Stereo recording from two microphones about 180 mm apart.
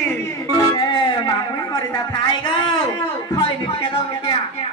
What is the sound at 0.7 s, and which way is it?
Speech, 25° left (ahead or behind).